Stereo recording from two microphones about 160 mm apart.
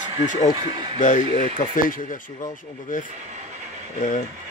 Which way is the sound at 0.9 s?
50° left (ahead or behind).